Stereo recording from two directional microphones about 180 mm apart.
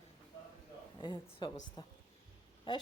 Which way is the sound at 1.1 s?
25° left (ahead or behind).